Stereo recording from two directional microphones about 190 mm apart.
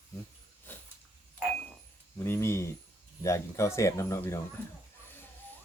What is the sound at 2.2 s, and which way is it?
Speech, 15° left (ahead or behind).